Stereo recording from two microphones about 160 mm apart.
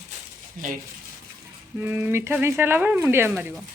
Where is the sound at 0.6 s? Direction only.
60° right (ahead or behind).